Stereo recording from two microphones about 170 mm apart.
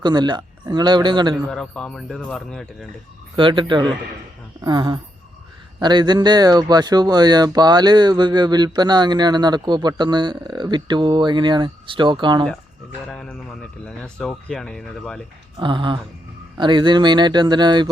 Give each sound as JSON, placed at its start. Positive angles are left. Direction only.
{"t": 0.0, "sound": "speech", "side_deg": -25}
{"t": 1.5, "sound": "speech", "side_deg": 5}
{"t": 3.3, "sound": "speech", "side_deg": -30}
{"t": 13.1, "sound": "speech", "side_deg": 5}
{"t": 15.5, "sound": "speech", "side_deg": -30}